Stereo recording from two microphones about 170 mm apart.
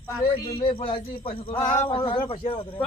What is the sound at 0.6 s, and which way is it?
A man's voice, 30° left (ahead or behind).